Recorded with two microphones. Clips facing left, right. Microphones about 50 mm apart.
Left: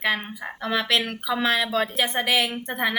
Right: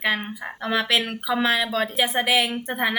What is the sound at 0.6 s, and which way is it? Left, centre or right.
Speech, centre.